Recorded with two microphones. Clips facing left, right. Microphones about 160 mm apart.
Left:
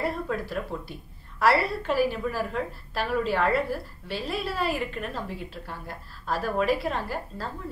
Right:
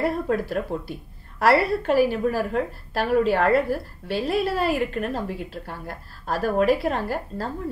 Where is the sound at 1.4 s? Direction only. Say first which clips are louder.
Right 4 dB; 45° right (ahead or behind).